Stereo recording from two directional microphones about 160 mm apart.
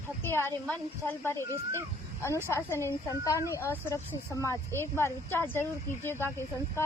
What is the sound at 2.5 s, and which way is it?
A woman's voice, 15° left (ahead or behind).